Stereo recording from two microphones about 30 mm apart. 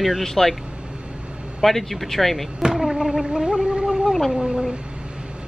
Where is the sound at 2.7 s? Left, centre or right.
Centre.